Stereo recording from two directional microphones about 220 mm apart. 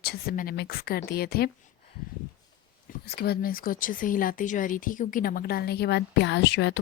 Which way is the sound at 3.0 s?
45° left (ahead or behind).